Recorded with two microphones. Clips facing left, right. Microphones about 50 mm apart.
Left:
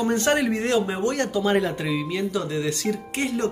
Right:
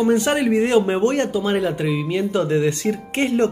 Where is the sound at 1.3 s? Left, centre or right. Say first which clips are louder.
Right 2 dB; centre.